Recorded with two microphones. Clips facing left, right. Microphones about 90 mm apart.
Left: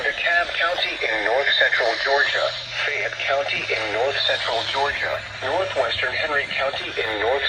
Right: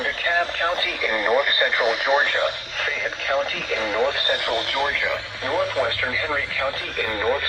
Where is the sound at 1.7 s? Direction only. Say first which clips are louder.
Even; 45° right (ahead or behind).